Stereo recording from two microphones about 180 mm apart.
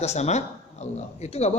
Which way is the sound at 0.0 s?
35° left (ahead or behind).